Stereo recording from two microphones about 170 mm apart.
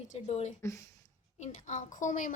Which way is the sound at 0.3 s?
40° left (ahead or behind).